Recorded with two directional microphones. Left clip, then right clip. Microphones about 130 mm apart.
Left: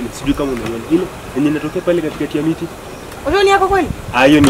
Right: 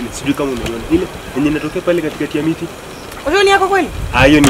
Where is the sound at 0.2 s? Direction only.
Centre (ahead or behind).